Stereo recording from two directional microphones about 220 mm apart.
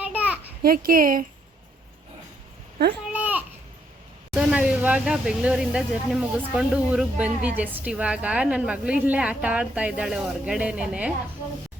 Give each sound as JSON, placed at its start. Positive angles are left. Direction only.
{"t": 0.0, "sound": "a sound", "side_deg": -5}
{"t": 0.6, "sound": "speech", "side_deg": -40}
{"t": 3.1, "sound": "babbling", "side_deg": -5}
{"t": 4.3, "sound": "speech", "side_deg": -5}